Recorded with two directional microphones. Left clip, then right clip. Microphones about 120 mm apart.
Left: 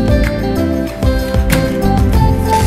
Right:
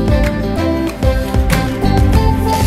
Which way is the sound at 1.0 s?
Centre (ahead or behind).